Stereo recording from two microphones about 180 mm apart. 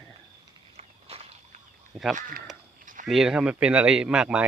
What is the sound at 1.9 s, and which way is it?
Speech, centre (ahead or behind).